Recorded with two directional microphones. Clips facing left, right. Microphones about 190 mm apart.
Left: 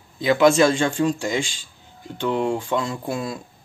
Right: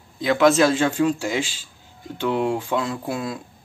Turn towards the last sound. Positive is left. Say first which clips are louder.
# even
turn(degrees=0)  # may be behind; listen again after turning